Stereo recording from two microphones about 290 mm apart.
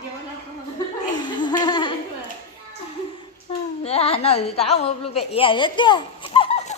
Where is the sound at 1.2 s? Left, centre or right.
Centre.